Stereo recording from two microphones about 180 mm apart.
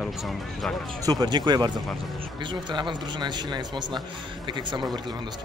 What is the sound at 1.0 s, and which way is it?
Speech, 20° right (ahead or behind).